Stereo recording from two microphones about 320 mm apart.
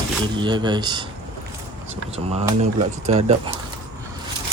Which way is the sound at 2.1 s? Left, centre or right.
Centre.